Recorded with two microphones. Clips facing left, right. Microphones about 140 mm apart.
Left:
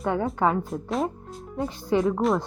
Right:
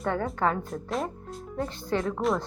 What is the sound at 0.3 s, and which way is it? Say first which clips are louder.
Speech: left 4 dB; 10° left (ahead or behind).